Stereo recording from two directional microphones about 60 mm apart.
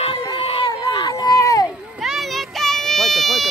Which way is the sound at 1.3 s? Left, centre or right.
Left.